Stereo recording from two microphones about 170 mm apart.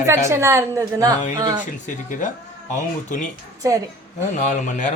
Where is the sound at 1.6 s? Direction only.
50° left (ahead or behind).